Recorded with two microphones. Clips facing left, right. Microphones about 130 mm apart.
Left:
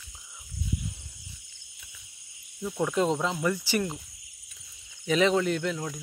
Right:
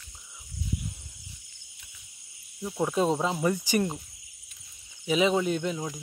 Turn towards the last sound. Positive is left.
turn(degrees=-15)  # may be behind; listen again after turning